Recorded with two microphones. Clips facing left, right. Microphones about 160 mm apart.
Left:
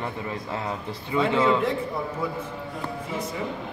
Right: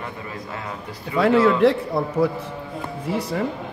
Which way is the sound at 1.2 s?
75° right (ahead or behind).